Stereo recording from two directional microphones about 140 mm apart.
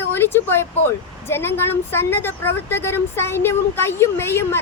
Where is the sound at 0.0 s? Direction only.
15° left (ahead or behind).